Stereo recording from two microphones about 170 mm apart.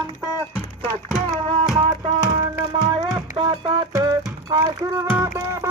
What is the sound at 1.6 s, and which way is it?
Music, 25° right (ahead or behind).